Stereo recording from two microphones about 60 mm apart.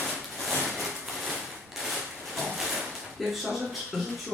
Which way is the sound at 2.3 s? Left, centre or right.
Centre.